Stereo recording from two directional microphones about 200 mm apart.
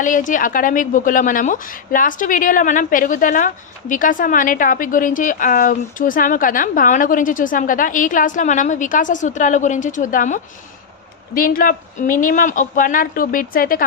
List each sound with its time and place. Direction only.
0.0 s speech: 40° left (ahead or behind)